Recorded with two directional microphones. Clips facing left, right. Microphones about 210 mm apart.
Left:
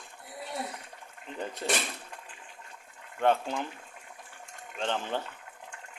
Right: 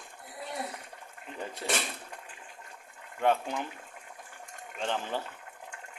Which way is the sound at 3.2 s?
5° right (ahead or behind).